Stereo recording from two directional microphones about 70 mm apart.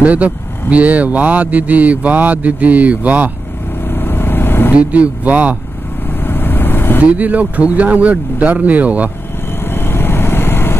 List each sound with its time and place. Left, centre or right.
0.0 s speech: centre
3.9 s vehicle: left
4.7 s speech: centre
6.2 s vehicle: left
7.2 s speech: right
9.7 s vehicle: left